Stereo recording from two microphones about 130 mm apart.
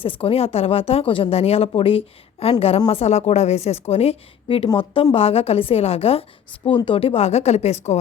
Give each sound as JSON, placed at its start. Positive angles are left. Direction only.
{"t": 0.0, "sound": "a woman's voice", "side_deg": 45}